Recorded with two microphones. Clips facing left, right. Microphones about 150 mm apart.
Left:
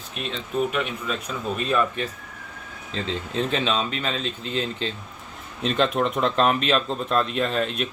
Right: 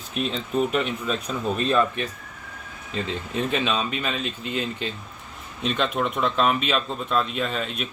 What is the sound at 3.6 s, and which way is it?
Speech, 25° left (ahead or behind).